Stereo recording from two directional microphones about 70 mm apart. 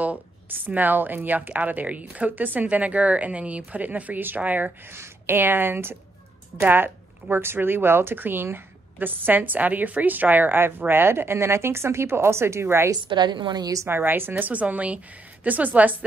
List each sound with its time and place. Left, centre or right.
0.0 s a woman's voice: right
4.9 s a woman's voice: right
12.9 s a woman's voice: right
13.8 s a woman's voice: right
14.3 s a woman's voice: right